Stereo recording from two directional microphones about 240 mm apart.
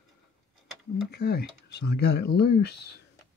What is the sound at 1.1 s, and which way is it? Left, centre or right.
Speech, left.